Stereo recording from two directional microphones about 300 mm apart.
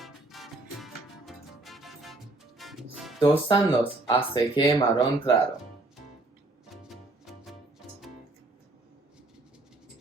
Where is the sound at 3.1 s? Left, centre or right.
Centre.